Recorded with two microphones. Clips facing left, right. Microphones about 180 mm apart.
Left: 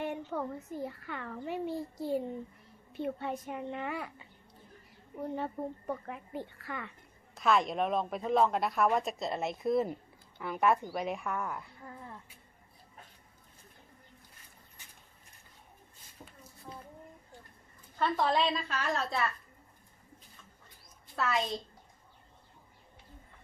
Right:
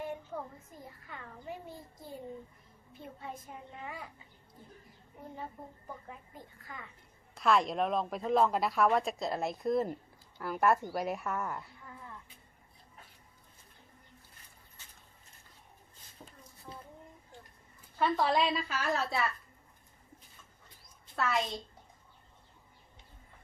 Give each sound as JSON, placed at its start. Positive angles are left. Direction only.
{"t": 0.0, "sound": "a child's voice", "side_deg": 75}
{"t": 5.4, "sound": "a child's voice", "side_deg": 70}
{"t": 7.3, "sound": "speech", "side_deg": 0}
{"t": 11.8, "sound": "cat", "side_deg": 35}
{"t": 17.9, "sound": "speech", "side_deg": -5}
{"t": 21.2, "sound": "speech", "side_deg": 0}